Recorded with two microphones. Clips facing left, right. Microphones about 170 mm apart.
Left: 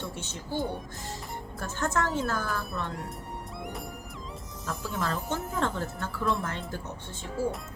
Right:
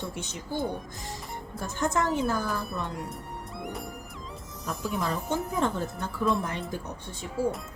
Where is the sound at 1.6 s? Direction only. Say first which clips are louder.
Right 2 dB; 15° right (ahead or behind).